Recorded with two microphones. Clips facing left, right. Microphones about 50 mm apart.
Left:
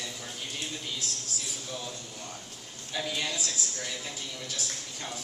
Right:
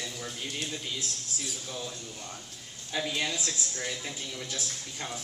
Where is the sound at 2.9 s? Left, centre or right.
Centre.